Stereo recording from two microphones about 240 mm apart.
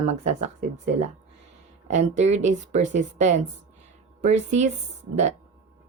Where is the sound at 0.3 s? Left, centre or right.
Right.